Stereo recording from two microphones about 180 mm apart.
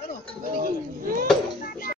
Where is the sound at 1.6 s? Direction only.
55° left (ahead or behind).